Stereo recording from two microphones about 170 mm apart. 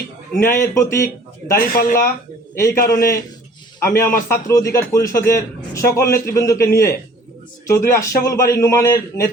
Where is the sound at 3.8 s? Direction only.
15° left (ahead or behind).